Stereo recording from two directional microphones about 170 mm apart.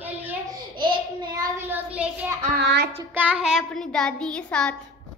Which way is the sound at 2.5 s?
75° right (ahead or behind).